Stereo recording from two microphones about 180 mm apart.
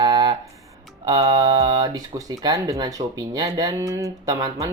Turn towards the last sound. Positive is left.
turn(degrees=-20)  # may be behind; listen again after turning